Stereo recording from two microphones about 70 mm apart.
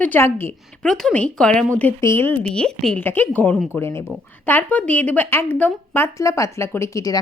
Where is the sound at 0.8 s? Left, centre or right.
Centre.